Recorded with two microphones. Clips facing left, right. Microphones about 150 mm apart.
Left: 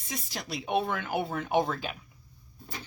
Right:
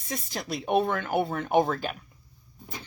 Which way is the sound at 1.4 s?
Centre (ahead or behind).